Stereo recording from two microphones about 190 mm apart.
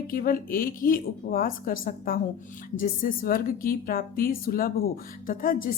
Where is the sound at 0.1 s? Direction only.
50° left (ahead or behind).